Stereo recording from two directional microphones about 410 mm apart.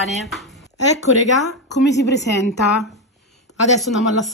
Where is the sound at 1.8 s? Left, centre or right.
Left.